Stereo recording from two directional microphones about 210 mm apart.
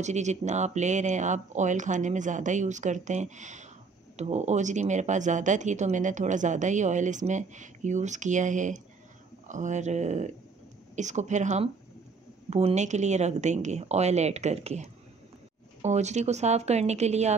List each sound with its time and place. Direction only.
0.0 s speech: 35° right (ahead or behind)